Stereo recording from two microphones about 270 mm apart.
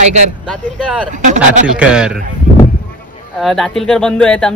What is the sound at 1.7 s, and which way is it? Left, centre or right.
Speech, centre.